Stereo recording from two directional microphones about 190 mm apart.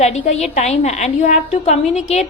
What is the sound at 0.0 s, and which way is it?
A woman's voice, 35° left (ahead or behind).